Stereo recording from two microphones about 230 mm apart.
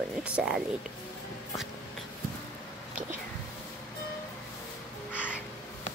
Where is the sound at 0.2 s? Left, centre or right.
Centre.